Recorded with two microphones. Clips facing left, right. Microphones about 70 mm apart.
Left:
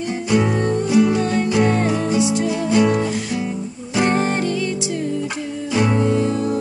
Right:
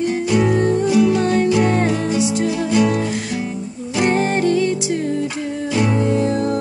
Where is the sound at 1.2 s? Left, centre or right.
Right.